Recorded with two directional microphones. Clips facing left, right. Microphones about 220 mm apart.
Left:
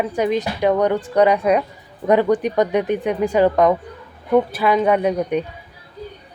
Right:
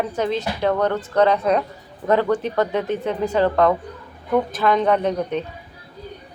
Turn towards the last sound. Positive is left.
turn(degrees=10)  # may be behind; listen again after turning